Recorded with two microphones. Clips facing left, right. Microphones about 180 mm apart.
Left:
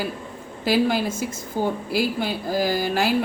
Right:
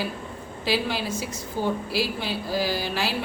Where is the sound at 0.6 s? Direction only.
50° left (ahead or behind).